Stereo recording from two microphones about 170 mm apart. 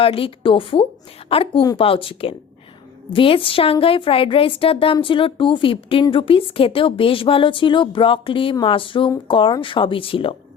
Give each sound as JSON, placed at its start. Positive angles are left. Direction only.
{"t": 0.0, "sound": "a woman's voice", "side_deg": 35}